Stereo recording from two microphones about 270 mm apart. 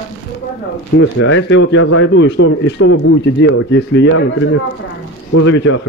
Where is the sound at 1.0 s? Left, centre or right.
Left.